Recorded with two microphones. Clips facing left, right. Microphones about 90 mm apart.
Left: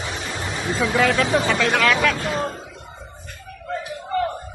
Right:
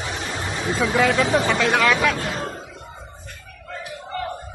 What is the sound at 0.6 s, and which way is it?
Speech, 10° right (ahead or behind).